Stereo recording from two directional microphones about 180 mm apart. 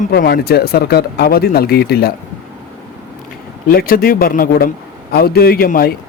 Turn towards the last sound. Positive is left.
turn(degrees=55)  # may be behind; listen again after turning